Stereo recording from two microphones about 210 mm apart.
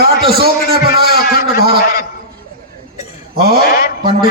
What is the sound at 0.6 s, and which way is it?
Speech, 50° left (ahead or behind).